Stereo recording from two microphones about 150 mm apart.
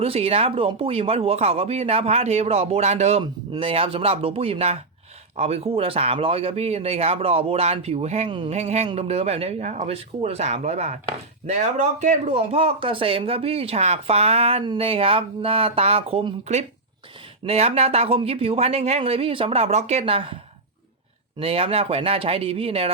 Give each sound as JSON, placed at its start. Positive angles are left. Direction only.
{"t": 0.0, "sound": "speech", "side_deg": -40}
{"t": 3.5, "sound": "a man's voice", "side_deg": -35}
{"t": 8.3, "sound": "a man's voice", "side_deg": -35}
{"t": 8.5, "sound": "a man's voice", "side_deg": -45}
{"t": 21.3, "sound": "a man's voice", "side_deg": -40}